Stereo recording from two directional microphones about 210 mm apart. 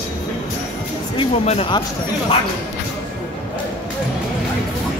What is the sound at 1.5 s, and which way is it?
Speech, 25° left (ahead or behind).